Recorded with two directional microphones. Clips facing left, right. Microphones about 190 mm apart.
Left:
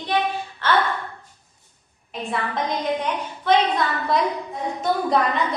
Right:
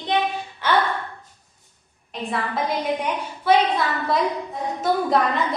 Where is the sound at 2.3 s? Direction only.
5° right (ahead or behind).